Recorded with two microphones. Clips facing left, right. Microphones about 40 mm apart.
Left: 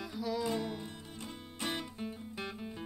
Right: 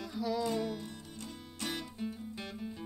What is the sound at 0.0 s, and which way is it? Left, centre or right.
Music, centre.